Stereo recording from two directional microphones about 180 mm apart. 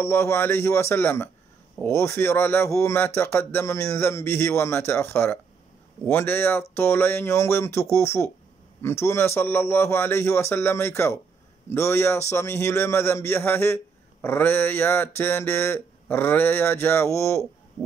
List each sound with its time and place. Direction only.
0.0 s speech: 15° left (ahead or behind)